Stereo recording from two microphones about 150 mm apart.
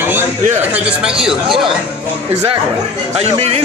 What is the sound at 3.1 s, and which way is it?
Speech, 45° right (ahead or behind).